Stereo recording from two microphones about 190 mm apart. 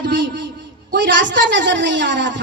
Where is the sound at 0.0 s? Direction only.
70° right (ahead or behind).